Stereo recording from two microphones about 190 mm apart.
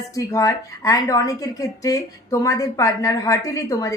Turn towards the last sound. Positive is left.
turn(degrees=15)  # may be behind; listen again after turning